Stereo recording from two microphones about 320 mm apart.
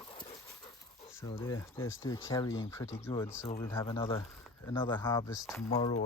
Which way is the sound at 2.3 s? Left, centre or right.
Centre.